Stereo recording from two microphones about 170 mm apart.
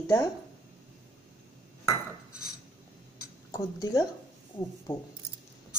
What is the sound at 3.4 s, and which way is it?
Speech, 20° left (ahead or behind).